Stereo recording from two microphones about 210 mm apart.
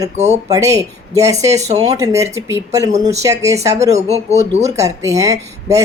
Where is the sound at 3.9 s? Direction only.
30° right (ahead or behind).